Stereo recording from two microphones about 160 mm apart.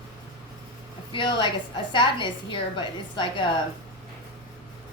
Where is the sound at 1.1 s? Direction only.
30° left (ahead or behind).